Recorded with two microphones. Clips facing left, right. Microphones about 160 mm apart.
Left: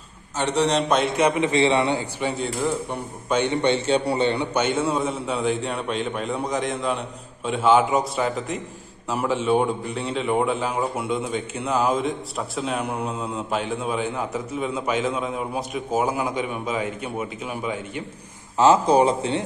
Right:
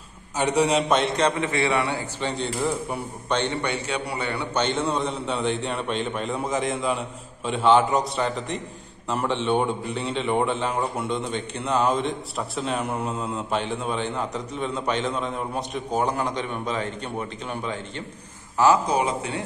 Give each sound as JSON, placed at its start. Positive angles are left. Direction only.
{"t": 0.4, "sound": "a man's voice", "side_deg": -10}
{"t": 3.6, "sound": "a man's voice", "side_deg": 25}
{"t": 4.6, "sound": "a man's voice", "side_deg": 5}
{"t": 18.6, "sound": "a man's voice", "side_deg": 25}